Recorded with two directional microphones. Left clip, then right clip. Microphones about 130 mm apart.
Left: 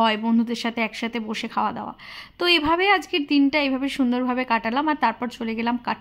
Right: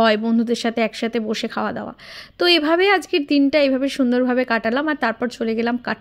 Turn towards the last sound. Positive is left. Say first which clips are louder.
# right 3 dB
turn(degrees=-25)  # may be behind; listen again after turning